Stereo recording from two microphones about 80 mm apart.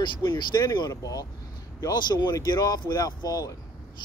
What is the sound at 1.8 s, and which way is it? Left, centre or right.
Speech, left.